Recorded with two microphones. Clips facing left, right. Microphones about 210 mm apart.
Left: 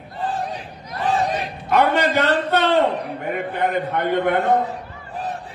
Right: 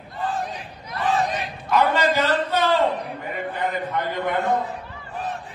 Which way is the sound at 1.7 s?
60° left (ahead or behind).